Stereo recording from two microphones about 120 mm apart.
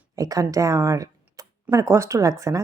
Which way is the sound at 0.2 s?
30° right (ahead or behind).